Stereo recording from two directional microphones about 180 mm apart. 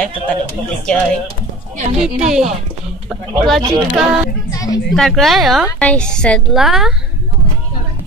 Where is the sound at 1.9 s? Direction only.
5° right (ahead or behind).